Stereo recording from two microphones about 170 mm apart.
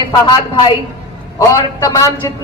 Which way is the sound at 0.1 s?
25° left (ahead or behind).